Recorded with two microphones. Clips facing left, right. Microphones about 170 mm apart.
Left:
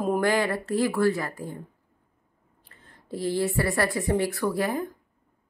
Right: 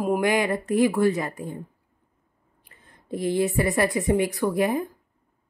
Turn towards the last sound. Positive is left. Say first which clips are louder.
# right 3 dB
turn(degrees=-20)  # may be behind; listen again after turning